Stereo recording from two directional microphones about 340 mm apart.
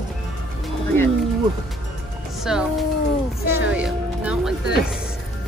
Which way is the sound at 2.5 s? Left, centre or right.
Centre.